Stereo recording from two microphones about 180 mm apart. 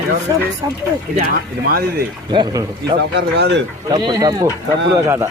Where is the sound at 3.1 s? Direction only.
70° right (ahead or behind).